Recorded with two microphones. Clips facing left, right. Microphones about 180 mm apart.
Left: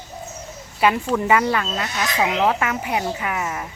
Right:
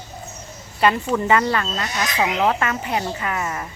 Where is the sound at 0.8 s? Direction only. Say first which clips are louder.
Even; 5° left (ahead or behind).